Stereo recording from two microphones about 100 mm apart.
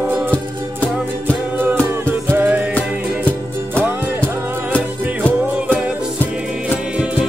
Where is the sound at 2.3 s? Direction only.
15° right (ahead or behind).